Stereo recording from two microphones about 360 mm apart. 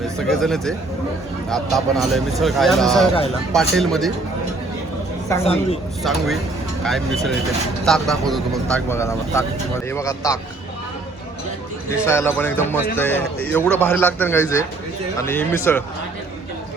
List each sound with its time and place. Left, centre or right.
0.2 s speech: centre
5.3 s speech: centre
6.0 s speech: centre
8.9 s speech: centre
12.0 s speech: centre